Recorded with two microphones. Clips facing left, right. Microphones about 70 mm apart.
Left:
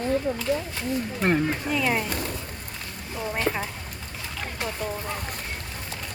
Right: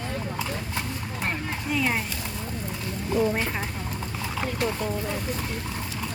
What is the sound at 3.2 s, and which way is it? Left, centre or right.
Speech, centre.